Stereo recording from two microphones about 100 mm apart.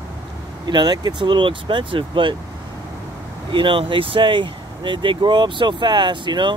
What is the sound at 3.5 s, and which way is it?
Speech, 60° right (ahead or behind).